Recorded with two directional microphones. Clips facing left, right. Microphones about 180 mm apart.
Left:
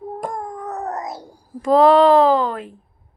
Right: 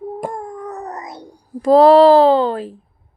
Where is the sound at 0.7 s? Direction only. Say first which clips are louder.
Left 3 dB; centre (ahead or behind).